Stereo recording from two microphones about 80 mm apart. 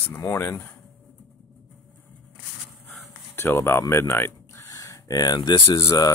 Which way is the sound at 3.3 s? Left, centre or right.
Left.